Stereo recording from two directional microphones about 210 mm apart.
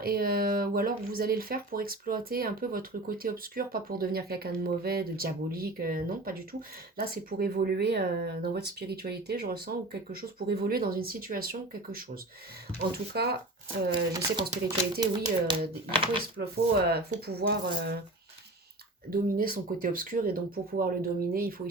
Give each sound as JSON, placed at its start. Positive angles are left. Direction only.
{"t": 0.0, "sound": "speech", "side_deg": -45}
{"t": 13.2, "sound": "speech", "side_deg": -50}
{"t": 14.1, "sound": "speech", "side_deg": -15}
{"t": 16.4, "sound": "speech", "side_deg": -50}
{"t": 19.1, "sound": "speech", "side_deg": -45}